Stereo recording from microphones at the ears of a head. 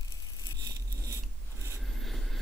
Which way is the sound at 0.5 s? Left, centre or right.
Right.